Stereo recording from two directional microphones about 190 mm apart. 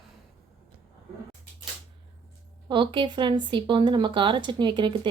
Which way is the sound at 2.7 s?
25° right (ahead or behind).